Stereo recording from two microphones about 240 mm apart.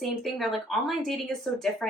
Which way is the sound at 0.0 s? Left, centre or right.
Centre.